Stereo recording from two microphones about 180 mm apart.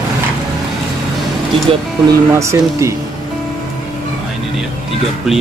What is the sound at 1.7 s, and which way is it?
Speech, 30° right (ahead or behind).